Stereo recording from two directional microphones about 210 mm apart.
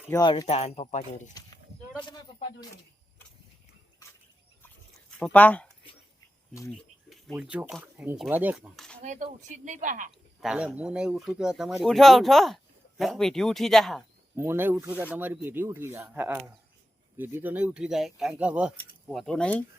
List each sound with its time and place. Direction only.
0.1 s speech: 20° left (ahead or behind)
1.3 s a sound: 15° left (ahead or behind)
5.2 s speech: 5° left (ahead or behind)
6.7 s speech: centre (ahead or behind)
9.0 s speech: 40° right (ahead or behind)
10.4 s speech: 5° right (ahead or behind)
14.3 s speech: 10° right (ahead or behind); by 19.6 s 5° left (ahead or behind)